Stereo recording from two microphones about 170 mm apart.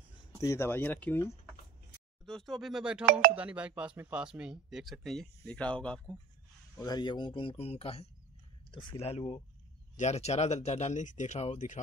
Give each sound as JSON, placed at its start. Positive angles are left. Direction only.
{"t": 0.4, "sound": "speech", "side_deg": 15}
{"t": 3.1, "sound": "speech", "side_deg": -60}
{"t": 3.3, "sound": "speech", "side_deg": -5}
{"t": 6.8, "sound": "speech", "side_deg": 25}